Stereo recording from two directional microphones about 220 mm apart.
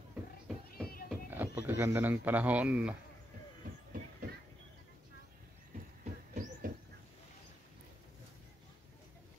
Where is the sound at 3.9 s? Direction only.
40° right (ahead or behind).